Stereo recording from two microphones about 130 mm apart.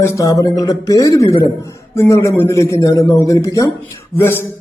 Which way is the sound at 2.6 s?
25° left (ahead or behind).